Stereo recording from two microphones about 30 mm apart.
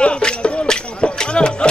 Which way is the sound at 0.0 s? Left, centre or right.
Left.